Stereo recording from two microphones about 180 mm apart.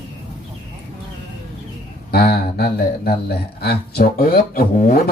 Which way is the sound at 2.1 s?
65° left (ahead or behind).